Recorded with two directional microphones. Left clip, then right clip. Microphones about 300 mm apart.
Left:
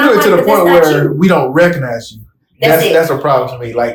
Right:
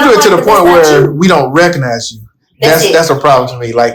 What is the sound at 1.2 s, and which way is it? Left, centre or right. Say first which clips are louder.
Speech: right 2 dB; right.